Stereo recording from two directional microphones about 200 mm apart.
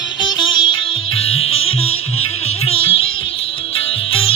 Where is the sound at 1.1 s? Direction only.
90° left.